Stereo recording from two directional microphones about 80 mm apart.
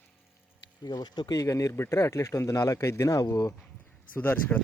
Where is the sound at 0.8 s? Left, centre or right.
Left.